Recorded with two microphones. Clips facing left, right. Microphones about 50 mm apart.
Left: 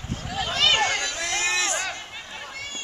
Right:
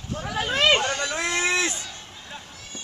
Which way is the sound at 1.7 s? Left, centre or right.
Left.